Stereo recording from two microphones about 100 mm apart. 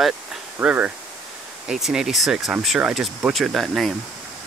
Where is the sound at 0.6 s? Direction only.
15° right (ahead or behind).